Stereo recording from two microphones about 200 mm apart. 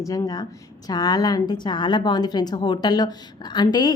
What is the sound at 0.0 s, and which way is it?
A woman's voice, 15° left (ahead or behind).